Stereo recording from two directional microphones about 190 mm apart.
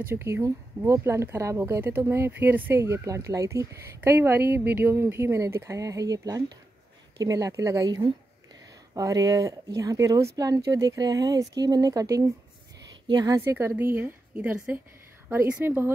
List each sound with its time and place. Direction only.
0.1 s speech: 15° right (ahead or behind)